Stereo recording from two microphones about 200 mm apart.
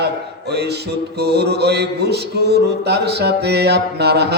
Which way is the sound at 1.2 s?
55° right (ahead or behind).